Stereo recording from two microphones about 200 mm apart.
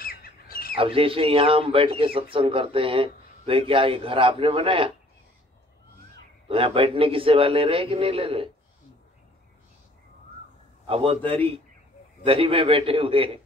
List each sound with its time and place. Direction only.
0.0 s bird: 45° left (ahead or behind)
0.7 s a man's voice: 25° right (ahead or behind)
6.5 s a man's voice: 30° right (ahead or behind)
10.9 s a man's voice: 25° right (ahead or behind)
12.3 s a man's voice: 25° right (ahead or behind)